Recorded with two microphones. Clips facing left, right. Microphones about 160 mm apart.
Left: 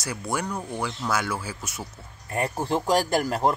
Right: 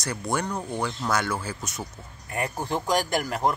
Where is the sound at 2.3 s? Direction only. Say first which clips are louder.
Left 3 dB; 30° left (ahead or behind).